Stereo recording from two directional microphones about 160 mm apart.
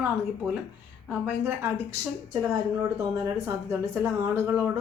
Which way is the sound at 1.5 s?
15° right (ahead or behind).